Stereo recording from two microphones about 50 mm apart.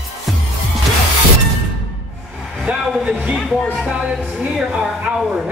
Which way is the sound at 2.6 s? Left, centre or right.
Right.